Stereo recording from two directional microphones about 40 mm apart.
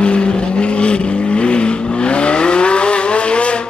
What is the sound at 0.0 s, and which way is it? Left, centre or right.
Vehicle, left.